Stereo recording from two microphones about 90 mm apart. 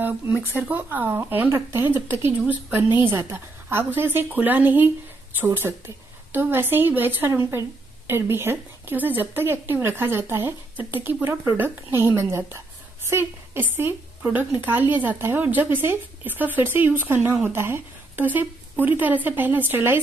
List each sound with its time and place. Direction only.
0.4 s a woman's voice: 20° right (ahead or behind)